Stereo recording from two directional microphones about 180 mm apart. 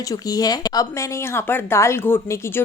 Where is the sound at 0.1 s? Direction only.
20° left (ahead or behind).